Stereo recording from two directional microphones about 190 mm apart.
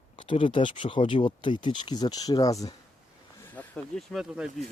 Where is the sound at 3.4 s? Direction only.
10° left (ahead or behind).